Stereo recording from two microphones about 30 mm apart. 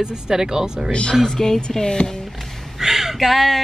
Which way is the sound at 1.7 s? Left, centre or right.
Left.